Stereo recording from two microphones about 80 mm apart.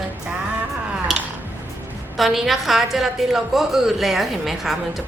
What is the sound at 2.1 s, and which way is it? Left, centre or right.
A woman's voice, centre.